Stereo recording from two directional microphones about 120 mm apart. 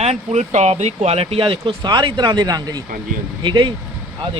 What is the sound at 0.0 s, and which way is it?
Speech, 65° right (ahead or behind).